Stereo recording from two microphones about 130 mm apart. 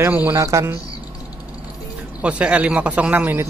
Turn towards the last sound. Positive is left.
turn(degrees=-15)  # may be behind; listen again after turning